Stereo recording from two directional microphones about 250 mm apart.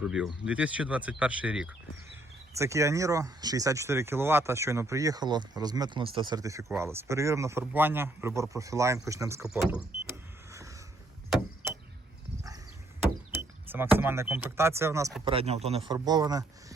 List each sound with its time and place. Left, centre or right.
0.0 s speech: centre
9.6 s vehicle: centre
13.7 s speech: centre
15.2 s speech: right